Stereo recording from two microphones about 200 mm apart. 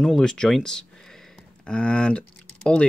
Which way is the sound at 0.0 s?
5° left (ahead or behind).